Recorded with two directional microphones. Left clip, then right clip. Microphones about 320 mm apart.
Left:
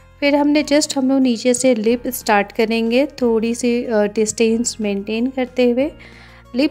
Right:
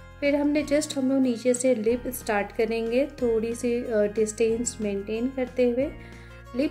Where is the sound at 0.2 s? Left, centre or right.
Left.